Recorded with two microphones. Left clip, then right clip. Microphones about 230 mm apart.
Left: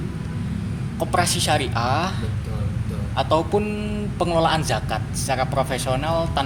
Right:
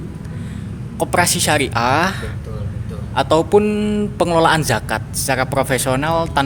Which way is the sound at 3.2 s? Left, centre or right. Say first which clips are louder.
Right 7 dB; right.